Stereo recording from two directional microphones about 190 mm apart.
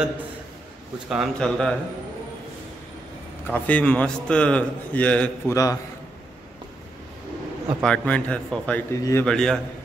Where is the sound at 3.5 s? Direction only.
5° left (ahead or behind).